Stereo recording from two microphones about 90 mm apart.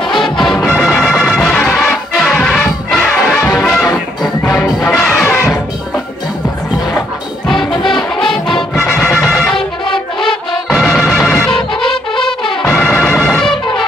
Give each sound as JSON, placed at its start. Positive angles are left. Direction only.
{"t": 0.0, "sound": "music", "side_deg": 5}
{"t": 4.9, "sound": "music", "side_deg": 0}
{"t": 5.2, "sound": "music", "side_deg": 25}
{"t": 7.4, "sound": "music", "side_deg": 0}
{"t": 12.9, "sound": "music", "side_deg": 25}
{"t": 13.2, "sound": "music", "side_deg": 5}